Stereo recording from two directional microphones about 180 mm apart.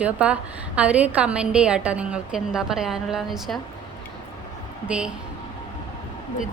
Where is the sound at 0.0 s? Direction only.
5° right (ahead or behind).